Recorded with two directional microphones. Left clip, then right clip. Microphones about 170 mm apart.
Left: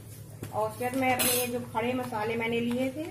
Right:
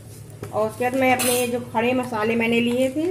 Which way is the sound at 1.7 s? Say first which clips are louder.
Right 9 dB; 50° right (ahead or behind).